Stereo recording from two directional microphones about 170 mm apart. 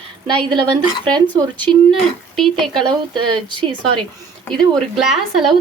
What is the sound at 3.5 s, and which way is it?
Speech, 30° right (ahead or behind).